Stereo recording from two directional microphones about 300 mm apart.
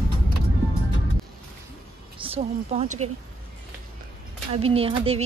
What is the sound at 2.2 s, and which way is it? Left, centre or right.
Speech, centre.